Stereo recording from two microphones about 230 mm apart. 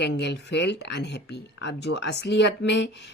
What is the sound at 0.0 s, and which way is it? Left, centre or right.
Speech, left.